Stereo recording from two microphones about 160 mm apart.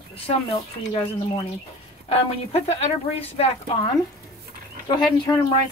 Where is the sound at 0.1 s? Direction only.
35° left (ahead or behind).